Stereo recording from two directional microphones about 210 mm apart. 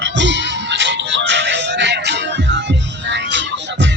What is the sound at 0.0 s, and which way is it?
Music, 60° right (ahead or behind).